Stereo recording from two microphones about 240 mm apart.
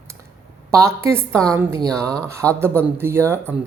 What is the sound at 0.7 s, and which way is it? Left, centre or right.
Speech, centre.